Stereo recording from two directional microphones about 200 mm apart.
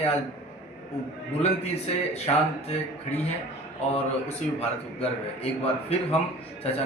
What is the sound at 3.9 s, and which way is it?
Speech, 30° left (ahead or behind).